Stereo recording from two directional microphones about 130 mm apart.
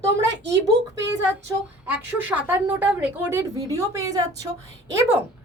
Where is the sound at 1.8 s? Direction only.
10° right (ahead or behind).